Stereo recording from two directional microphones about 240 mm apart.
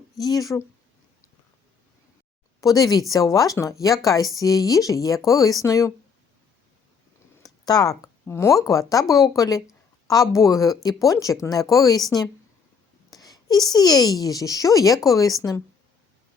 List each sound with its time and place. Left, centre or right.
0.2 s speech: centre
2.6 s speech: centre
7.6 s speech: centre